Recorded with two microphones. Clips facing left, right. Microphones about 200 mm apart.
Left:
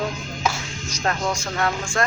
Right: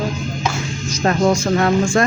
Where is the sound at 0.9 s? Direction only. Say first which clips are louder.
Right 9 dB; 20° right (ahead or behind).